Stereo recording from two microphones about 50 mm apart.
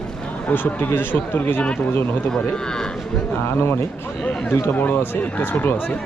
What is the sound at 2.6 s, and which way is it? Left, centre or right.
Speech, centre.